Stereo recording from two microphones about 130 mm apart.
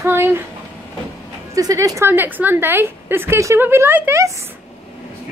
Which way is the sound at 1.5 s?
25° right (ahead or behind).